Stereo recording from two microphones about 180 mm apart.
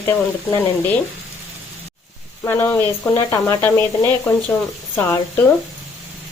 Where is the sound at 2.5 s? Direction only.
15° left (ahead or behind).